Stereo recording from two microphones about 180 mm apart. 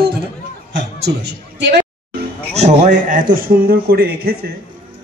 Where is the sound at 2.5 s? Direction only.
40° right (ahead or behind).